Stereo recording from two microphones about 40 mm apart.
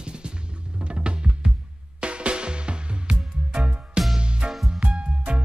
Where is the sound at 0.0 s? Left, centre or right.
Right.